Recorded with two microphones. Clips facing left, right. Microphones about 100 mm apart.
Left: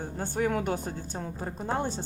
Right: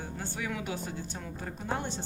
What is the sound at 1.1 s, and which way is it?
Speech, 35° left (ahead or behind).